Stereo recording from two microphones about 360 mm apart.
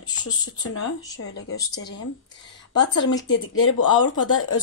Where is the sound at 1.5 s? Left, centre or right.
Left.